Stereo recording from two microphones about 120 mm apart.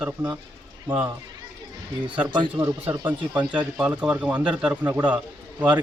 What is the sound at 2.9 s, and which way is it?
Speech, 15° right (ahead or behind).